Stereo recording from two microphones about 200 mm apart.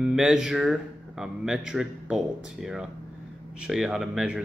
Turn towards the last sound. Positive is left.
turn(degrees=-5)  # may be behind; listen again after turning